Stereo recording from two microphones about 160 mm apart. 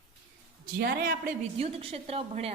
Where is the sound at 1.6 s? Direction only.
35° right (ahead or behind).